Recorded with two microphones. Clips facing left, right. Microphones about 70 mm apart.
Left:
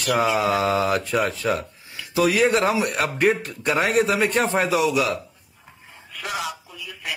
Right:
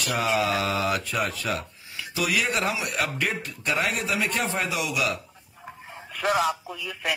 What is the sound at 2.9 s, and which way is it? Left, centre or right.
A man's voice, left.